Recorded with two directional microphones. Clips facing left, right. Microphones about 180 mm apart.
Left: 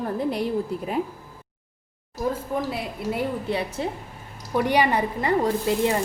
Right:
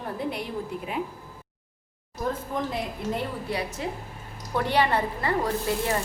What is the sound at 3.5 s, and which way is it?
Speech, 25° left (ahead or behind).